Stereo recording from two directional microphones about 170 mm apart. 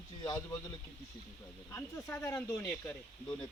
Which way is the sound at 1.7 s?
15° left (ahead or behind).